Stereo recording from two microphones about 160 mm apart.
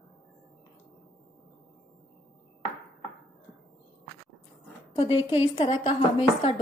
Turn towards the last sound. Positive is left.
turn(degrees=35)  # may be behind; listen again after turning